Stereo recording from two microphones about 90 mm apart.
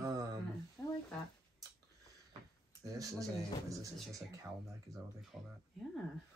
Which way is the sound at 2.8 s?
40° right (ahead or behind).